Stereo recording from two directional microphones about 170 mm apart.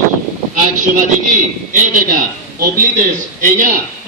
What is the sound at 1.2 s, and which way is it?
A man's voice, 50° right (ahead or behind).